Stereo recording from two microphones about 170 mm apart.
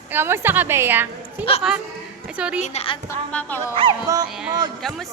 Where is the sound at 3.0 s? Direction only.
10° left (ahead or behind).